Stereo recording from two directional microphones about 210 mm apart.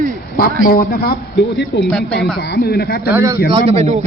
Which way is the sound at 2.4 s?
50° left (ahead or behind).